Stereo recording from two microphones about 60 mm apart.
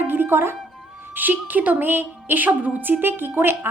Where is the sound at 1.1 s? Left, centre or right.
Right.